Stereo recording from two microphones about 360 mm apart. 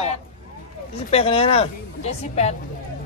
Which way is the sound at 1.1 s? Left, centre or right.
Centre.